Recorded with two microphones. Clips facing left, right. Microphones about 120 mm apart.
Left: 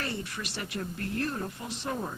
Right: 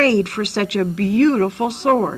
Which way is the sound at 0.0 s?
75° right (ahead or behind).